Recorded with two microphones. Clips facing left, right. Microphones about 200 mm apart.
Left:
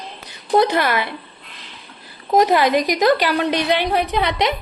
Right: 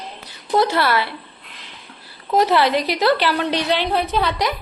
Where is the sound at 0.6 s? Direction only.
15° left (ahead or behind).